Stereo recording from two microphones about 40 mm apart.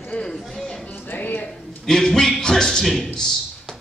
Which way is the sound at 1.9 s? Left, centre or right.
Centre.